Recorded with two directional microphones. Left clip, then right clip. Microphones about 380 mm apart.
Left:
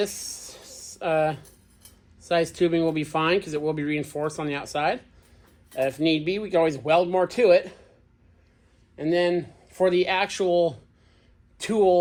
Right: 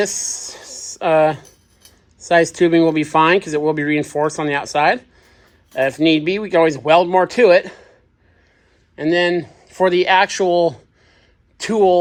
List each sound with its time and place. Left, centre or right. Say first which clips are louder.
0.0 s a sound: right 8 dB; right
0.9 s speech: right 9 dB; centre
6.0 s speech: right 8 dB; right
9.0 s speech: right 6 dB; right